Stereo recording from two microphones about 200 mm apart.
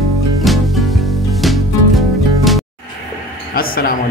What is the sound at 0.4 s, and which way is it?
Music, centre (ahead or behind).